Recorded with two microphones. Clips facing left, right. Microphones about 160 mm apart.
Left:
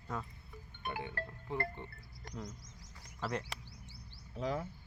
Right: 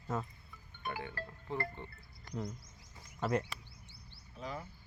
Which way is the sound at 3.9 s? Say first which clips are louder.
Left 3 dB; 90° left.